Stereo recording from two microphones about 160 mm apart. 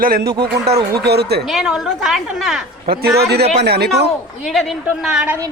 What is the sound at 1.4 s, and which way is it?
A woman's voice, centre (ahead or behind).